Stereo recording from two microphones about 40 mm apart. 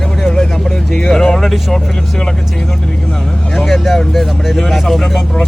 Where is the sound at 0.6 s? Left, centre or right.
Centre.